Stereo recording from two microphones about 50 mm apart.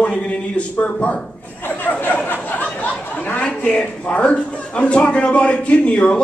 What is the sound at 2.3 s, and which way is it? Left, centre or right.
A man's voice, left.